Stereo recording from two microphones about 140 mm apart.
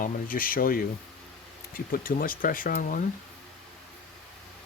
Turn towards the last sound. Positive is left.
turn(degrees=75)  # may be behind; listen again after turning